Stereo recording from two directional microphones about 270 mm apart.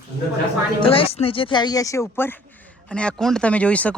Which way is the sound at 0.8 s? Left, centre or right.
Left.